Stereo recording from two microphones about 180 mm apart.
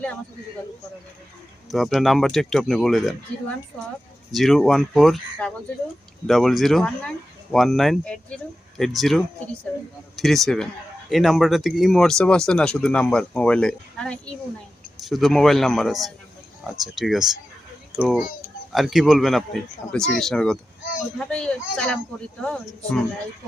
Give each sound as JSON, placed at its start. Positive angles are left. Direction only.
{"t": 1.7, "sound": "speech", "side_deg": 0}
{"t": 4.3, "sound": "a child's voice", "side_deg": 0}